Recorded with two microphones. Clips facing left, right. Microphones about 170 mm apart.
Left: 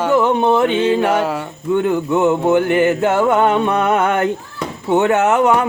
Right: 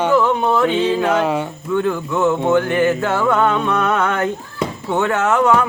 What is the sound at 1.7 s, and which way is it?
Speech, 20° left (ahead or behind).